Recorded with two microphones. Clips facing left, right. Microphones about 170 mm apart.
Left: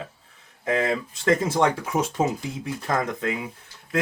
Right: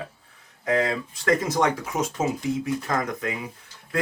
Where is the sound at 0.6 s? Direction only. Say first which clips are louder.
Even; 25° left (ahead or behind).